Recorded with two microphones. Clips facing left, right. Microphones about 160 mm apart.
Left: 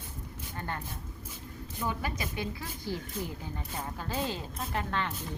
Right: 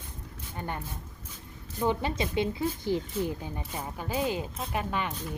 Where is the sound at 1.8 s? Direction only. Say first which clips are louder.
Right 7 dB; 25° right (ahead or behind).